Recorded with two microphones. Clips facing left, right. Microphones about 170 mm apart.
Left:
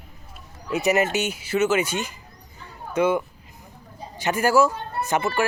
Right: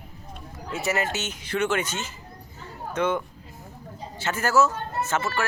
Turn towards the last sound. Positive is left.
turn(degrees=15)  # may be behind; listen again after turning